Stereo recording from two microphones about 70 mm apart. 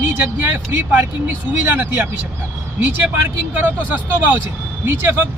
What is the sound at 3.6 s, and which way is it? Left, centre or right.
Speech, right.